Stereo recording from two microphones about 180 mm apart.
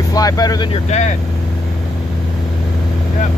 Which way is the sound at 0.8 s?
40° left (ahead or behind).